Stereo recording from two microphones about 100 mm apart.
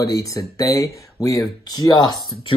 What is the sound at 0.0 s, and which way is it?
Speech, 35° left (ahead or behind).